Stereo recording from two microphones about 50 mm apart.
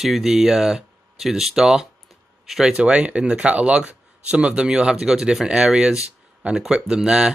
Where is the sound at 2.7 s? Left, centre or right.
Right.